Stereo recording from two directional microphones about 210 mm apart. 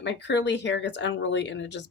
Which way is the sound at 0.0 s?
55° left (ahead or behind).